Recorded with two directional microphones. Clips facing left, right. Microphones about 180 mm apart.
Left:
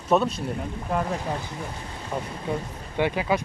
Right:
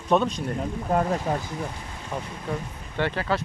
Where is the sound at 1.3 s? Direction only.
45° right (ahead or behind).